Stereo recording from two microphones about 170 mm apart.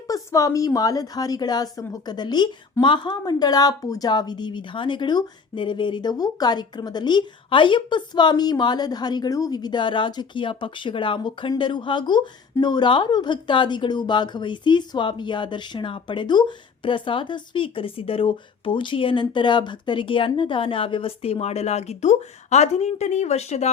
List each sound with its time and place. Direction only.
0.1 s a woman's voice: 20° left (ahead or behind); by 23.7 s 40° left (ahead or behind)